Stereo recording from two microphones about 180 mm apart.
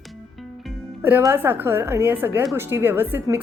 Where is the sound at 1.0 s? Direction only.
10° right (ahead or behind).